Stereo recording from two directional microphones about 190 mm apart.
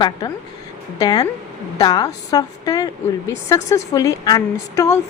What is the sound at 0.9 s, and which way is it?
A woman's voice, 20° left (ahead or behind).